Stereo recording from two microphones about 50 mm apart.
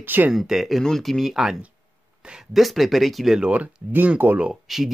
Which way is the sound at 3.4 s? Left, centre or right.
Right.